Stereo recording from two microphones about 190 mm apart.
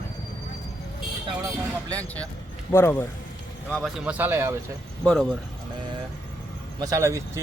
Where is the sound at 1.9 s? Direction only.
5° left (ahead or behind).